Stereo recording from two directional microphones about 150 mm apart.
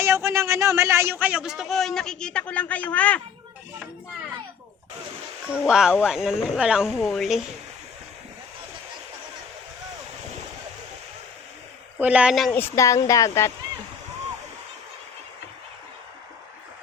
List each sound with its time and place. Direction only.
0.0 s a man's voice: 15° right (ahead or behind); by 3.2 s 10° left (ahead or behind)
5.6 s a man's voice: 5° right (ahead or behind)
11.9 s speech: 10° right (ahead or behind)
12.5 s speech: 15° left (ahead or behind)